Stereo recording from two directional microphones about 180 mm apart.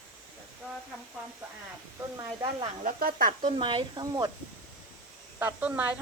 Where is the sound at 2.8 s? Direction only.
50° right (ahead or behind).